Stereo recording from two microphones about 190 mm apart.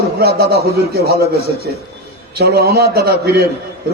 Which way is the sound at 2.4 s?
55° right (ahead or behind).